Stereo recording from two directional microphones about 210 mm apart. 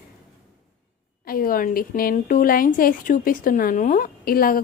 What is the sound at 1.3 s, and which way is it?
A woman's voice, 45° left (ahead or behind).